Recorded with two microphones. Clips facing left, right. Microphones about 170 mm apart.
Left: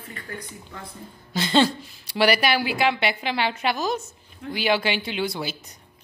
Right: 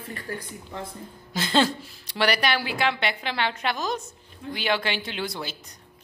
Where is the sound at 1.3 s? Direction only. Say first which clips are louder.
Left 3 dB; centre (ahead or behind).